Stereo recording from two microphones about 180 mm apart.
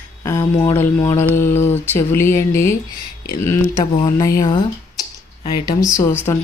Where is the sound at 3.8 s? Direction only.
25° left (ahead or behind).